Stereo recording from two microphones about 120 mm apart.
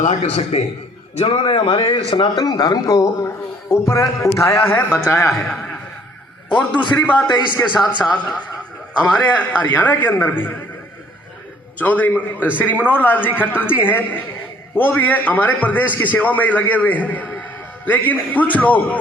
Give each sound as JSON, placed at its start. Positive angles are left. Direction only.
{"t": 0.1, "sound": "a man's voice", "side_deg": 60}
{"t": 1.2, "sound": "a man's voice", "side_deg": 45}
{"t": 5.2, "sound": "a man's voice", "side_deg": 5}
{"t": 11.8, "sound": "a man's voice", "side_deg": 15}